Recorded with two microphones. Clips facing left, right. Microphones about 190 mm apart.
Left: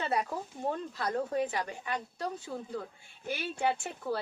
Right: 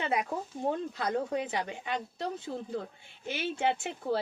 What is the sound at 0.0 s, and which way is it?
A woman's voice, 15° right (ahead or behind).